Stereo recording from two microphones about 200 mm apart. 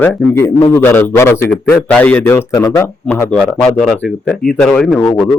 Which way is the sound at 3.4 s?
Centre (ahead or behind).